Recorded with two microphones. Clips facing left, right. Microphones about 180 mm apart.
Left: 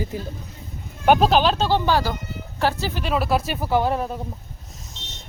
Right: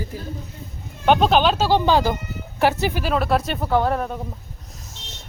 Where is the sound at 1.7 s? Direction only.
15° right (ahead or behind).